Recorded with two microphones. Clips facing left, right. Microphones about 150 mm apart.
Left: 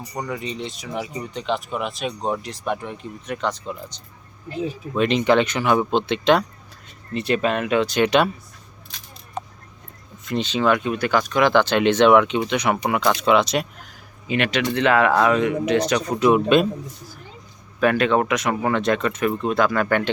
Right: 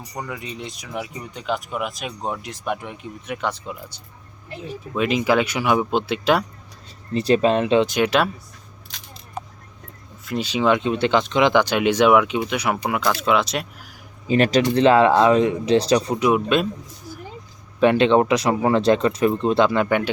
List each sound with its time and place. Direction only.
0.1 s speech: centre (ahead or behind)
7.1 s speech: 35° right (ahead or behind)
7.9 s speech: 5° right (ahead or behind)
9.4 s a sound: 5° right (ahead or behind)
10.2 s speech: 10° right (ahead or behind)
14.3 s speech: 40° right (ahead or behind)
16.1 s speech: 5° right (ahead or behind)
17.7 s speech: 25° right (ahead or behind)